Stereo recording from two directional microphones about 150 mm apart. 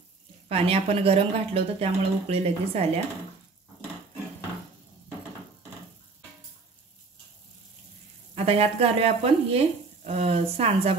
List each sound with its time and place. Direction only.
0.5 s speech: 40° right (ahead or behind)
8.5 s speech: 45° right (ahead or behind)